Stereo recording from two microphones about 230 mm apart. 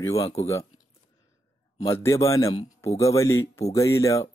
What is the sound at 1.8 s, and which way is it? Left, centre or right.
Speech, centre.